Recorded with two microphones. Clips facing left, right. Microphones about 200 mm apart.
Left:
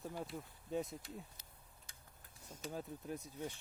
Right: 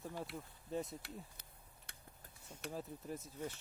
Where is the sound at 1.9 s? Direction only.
65° right (ahead or behind).